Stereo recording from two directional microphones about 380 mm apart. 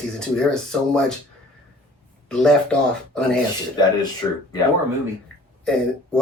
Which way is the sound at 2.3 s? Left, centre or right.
Centre.